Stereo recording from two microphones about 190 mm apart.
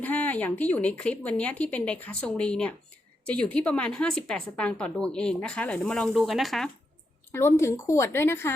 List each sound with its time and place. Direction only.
0.0 s a woman's voice: 10° left (ahead or behind)
7.3 s a woman's voice: 15° left (ahead or behind)